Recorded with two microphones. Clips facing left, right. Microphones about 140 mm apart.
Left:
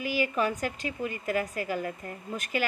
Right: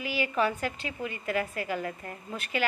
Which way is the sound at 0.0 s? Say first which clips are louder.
Even; 45° left (ahead or behind).